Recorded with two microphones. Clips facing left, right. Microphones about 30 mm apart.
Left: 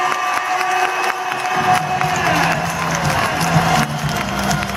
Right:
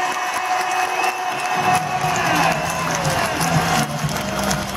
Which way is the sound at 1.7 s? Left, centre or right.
Centre.